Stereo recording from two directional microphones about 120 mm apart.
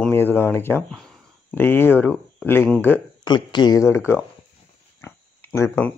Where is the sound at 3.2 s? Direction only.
40° left (ahead or behind).